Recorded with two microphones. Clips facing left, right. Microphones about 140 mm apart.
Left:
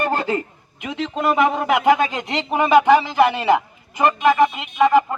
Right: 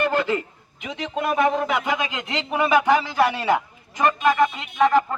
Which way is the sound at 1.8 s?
50° left (ahead or behind).